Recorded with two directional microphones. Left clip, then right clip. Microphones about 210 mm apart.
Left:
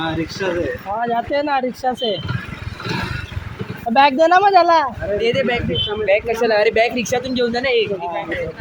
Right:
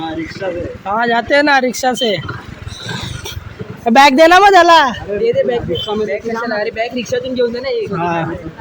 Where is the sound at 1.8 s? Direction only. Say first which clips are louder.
Right 5 dB; 25° right (ahead or behind).